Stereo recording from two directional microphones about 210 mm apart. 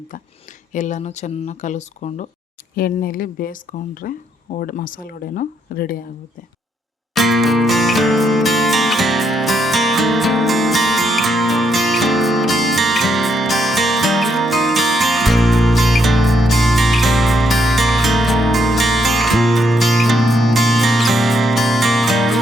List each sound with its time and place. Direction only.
0.7 s speech: 35° left (ahead or behind)
7.1 s music: centre (ahead or behind)